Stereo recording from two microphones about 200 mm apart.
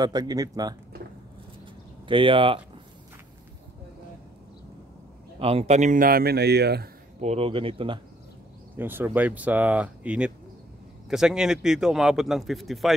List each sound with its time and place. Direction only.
0.0 s speech: 20° right (ahead or behind)
2.0 s speech: 25° right (ahead or behind)
5.4 s speech: 30° right (ahead or behind); by 6.9 s 55° right (ahead or behind)
7.2 s speech: 30° right (ahead or behind)
8.7 s speech: 10° right (ahead or behind)